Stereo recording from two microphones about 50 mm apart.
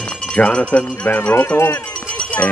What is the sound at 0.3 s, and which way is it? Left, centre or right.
Speech, left.